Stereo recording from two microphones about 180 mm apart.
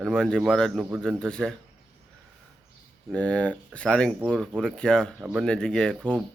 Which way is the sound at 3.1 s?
5° left (ahead or behind).